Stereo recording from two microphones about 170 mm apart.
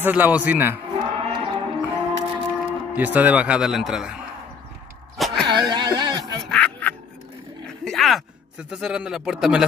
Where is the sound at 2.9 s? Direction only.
10° right (ahead or behind).